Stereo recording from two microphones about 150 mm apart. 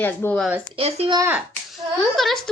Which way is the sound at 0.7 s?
40° right (ahead or behind).